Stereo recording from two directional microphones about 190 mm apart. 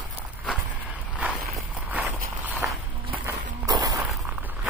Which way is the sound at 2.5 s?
Centre (ahead or behind).